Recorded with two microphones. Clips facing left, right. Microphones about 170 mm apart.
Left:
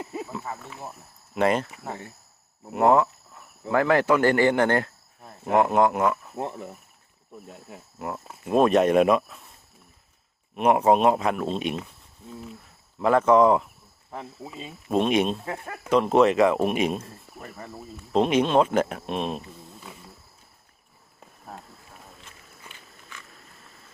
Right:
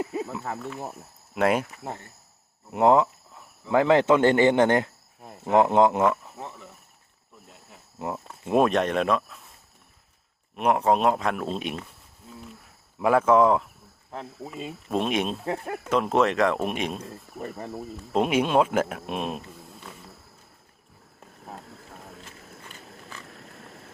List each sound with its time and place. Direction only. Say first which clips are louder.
0.0 s cricket: right 4 dB; centre (ahead or behind)
1.4 s speech: even; 5° right (ahead or behind)
2.7 s speech: even; 20° right (ahead or behind)
7.4 s speech: left 7 dB; 50° left (ahead or behind)
7.9 s speech: right 1 dB; 20° right (ahead or behind)
8.6 s speech: left 5 dB; 5° left (ahead or behind)
10.5 s a man's voice: left 3 dB; centre (ahead or behind)
13.0 s a man's voice: left 1 dB; 10° right (ahead or behind)
18.1 s speech: left 2 dB; 5° right (ahead or behind)
19.9 s insect: even; 5° left (ahead or behind)
23.6 s vehicle: right 7 dB; 70° right (ahead or behind)